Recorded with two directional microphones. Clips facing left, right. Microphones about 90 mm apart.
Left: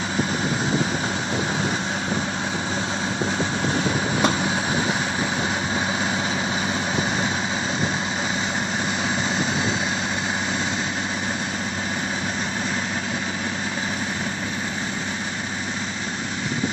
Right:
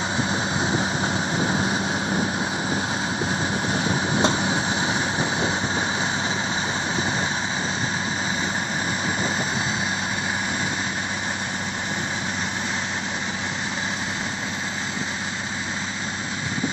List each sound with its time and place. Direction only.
3.7 s vehicle: 30° right (ahead or behind)